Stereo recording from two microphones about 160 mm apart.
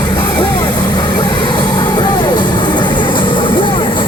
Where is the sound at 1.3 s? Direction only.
30° left (ahead or behind).